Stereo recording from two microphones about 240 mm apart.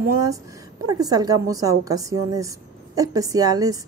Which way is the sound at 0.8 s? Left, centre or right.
Centre.